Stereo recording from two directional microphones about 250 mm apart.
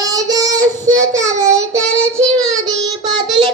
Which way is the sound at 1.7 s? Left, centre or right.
Centre.